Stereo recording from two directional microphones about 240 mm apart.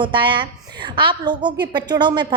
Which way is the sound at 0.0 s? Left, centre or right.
Centre.